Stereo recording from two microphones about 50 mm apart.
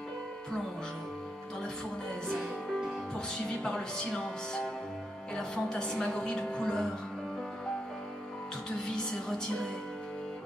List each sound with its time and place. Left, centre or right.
3.3 s a woman's voice: centre
8.6 s a woman's voice: centre